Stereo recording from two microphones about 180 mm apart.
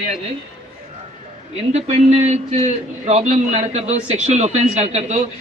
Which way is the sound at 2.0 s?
35° right (ahead or behind).